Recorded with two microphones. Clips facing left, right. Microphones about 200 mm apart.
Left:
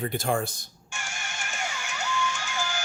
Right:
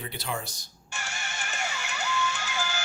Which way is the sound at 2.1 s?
10° left (ahead or behind).